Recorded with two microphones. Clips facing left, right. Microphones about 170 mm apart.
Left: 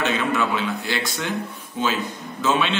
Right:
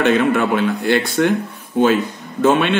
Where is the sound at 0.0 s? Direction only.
55° right (ahead or behind).